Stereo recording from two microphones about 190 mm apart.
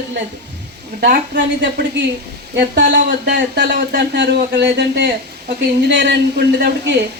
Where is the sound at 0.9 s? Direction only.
60° right (ahead or behind).